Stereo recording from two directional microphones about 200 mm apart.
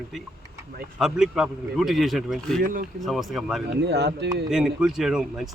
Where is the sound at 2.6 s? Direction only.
45° right (ahead or behind).